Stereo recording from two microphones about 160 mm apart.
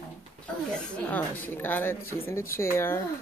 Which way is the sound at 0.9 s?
10° left (ahead or behind).